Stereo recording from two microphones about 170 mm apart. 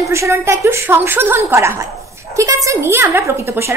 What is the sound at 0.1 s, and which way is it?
A woman's voice, 15° right (ahead or behind).